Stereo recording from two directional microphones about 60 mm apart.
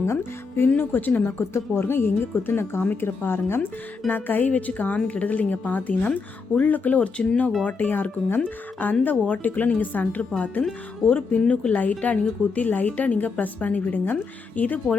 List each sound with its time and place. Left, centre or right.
0.0 s speech: left
0.8 s a woman's voice: left
1.5 s a woman's voice: left